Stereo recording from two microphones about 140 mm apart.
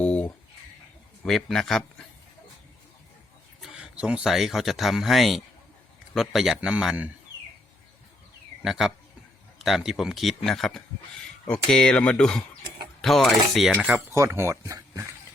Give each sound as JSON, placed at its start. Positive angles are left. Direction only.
{"t": 0.0, "sound": "a sound", "side_deg": 10}
{"t": 1.2, "sound": "speech", "side_deg": 5}
{"t": 3.6, "sound": "speech", "side_deg": -5}
{"t": 8.6, "sound": "speech", "side_deg": -5}
{"t": 14.1, "sound": "speech", "side_deg": -20}